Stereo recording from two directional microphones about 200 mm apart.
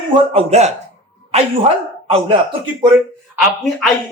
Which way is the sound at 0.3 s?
35° right (ahead or behind).